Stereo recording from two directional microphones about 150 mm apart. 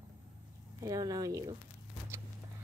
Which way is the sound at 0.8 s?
25° right (ahead or behind).